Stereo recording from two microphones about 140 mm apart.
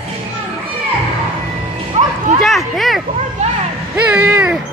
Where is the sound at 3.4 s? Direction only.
50° right (ahead or behind).